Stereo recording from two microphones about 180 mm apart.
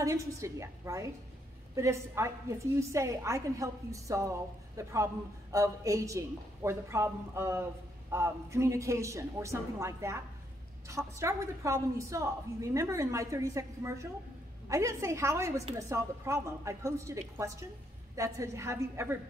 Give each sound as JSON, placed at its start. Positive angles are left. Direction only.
{"t": 0.0, "sound": "a woman's voice", "side_deg": -15}